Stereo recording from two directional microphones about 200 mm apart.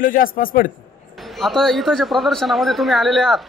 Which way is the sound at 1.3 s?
Centre (ahead or behind).